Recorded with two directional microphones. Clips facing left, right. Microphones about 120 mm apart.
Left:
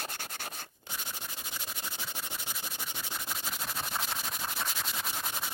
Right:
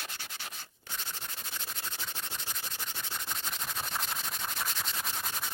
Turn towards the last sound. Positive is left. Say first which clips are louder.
# left 1 dB
turn(degrees=5)  # may be behind; listen again after turning